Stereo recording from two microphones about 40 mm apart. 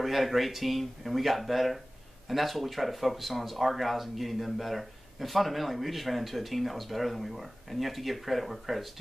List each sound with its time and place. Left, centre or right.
0.0 s speech: centre